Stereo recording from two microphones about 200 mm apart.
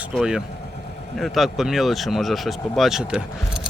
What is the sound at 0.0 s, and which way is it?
Speech, centre (ahead or behind).